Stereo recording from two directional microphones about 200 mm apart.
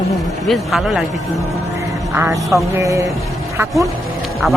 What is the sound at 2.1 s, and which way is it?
Speech, 10° right (ahead or behind).